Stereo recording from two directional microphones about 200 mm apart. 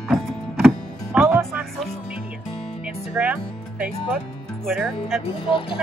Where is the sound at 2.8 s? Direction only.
5° right (ahead or behind).